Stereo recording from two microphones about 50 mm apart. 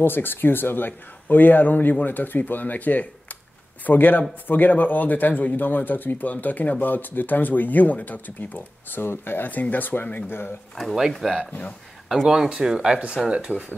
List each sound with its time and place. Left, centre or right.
0.0 s speech: left
11.0 s speech: centre
13.5 s speech: right